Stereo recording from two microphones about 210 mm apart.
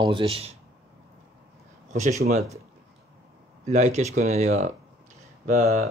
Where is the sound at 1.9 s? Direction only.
35° right (ahead or behind).